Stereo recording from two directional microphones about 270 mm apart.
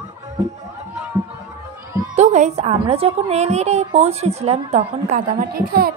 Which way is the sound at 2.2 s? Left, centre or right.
Right.